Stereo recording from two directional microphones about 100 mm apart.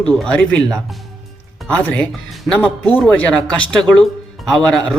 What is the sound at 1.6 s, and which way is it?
Speech, 10° left (ahead or behind).